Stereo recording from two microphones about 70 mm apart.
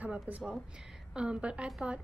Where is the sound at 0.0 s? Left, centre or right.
Centre.